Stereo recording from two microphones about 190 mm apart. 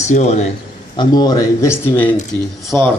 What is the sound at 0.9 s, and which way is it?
A man's voice, 20° left (ahead or behind).